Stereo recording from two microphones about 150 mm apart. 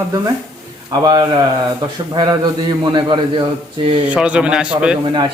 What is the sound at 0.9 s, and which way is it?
A man's voice, 25° right (ahead or behind).